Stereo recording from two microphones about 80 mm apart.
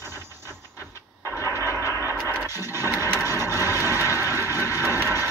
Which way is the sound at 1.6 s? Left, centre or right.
Left.